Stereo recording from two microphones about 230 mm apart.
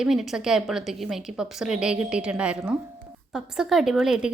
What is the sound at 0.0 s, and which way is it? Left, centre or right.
A woman's voice, centre.